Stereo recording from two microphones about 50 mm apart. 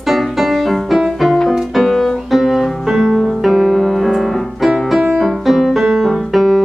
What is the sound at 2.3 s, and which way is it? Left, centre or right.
Music, centre.